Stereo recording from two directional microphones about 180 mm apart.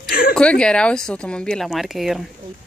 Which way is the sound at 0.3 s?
5° left (ahead or behind).